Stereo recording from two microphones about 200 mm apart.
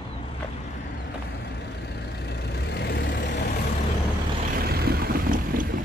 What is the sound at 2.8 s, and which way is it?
Vehicle, 55° left (ahead or behind).